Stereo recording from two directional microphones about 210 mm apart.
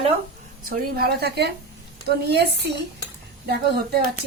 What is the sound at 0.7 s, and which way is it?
Speech, 45° right (ahead or behind).